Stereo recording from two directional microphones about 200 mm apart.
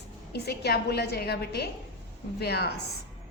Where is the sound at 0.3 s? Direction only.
55° left (ahead or behind).